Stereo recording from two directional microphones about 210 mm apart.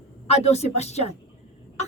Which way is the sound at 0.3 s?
30° left (ahead or behind).